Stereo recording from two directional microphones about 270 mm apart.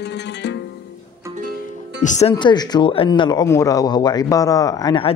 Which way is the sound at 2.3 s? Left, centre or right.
Centre.